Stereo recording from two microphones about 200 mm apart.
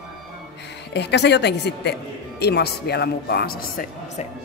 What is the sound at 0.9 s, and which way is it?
Speech, 60° left (ahead or behind).